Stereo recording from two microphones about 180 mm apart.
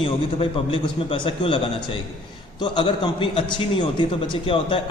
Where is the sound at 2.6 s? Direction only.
25° left (ahead or behind).